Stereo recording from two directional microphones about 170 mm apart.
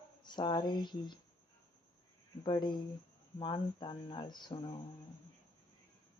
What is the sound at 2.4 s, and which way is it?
Mantra, 25° left (ahead or behind).